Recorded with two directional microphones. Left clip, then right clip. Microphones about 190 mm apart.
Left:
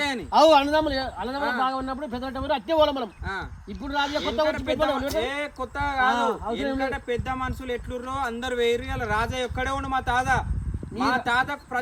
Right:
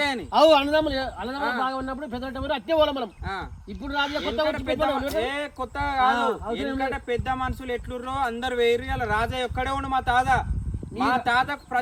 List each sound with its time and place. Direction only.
0.0 s a sound: centre (ahead or behind)
0.3 s speech: 10° left (ahead or behind)
1.4 s speech: centre (ahead or behind)
1.6 s speech: 15° left (ahead or behind)
4.4 s speech: centre (ahead or behind)